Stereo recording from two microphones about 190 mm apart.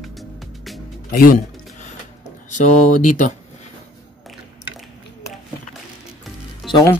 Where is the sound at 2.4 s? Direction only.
40° left (ahead or behind).